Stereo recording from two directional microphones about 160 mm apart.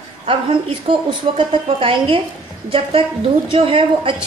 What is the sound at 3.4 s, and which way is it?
Speech, 35° right (ahead or behind).